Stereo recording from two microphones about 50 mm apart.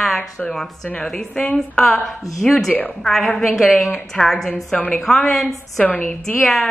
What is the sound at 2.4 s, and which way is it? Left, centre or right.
A woman's voice, centre.